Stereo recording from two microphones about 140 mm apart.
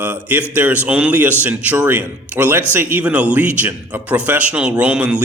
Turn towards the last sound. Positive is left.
turn(degrees=-10)  # may be behind; listen again after turning